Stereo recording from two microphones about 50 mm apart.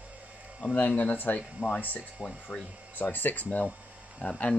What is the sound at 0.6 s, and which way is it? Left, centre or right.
Speech, left.